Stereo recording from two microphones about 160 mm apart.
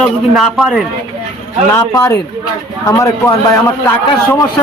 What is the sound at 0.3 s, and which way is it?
Speech, centre (ahead or behind).